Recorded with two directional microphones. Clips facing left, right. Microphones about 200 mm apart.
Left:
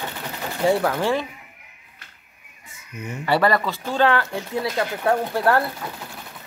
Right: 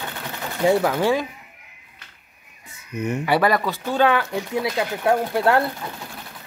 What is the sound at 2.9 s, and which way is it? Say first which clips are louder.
Speech: right 8 dB; 65° right (ahead or behind).